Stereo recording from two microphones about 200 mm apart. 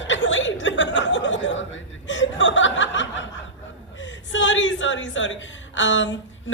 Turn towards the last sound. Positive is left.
turn(degrees=70)  # may be behind; listen again after turning